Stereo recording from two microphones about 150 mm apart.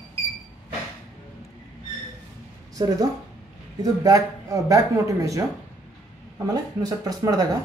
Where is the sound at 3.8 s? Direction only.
20° right (ahead or behind).